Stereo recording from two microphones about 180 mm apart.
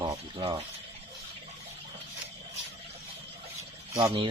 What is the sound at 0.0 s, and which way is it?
Rattle, 25° right (ahead or behind).